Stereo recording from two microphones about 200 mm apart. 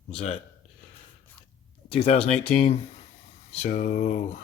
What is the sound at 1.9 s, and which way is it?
Speech, 30° left (ahead or behind).